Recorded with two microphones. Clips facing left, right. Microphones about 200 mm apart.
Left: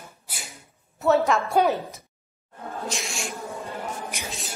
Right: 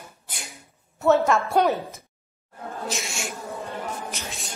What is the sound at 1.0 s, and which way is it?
Music, centre (ahead or behind).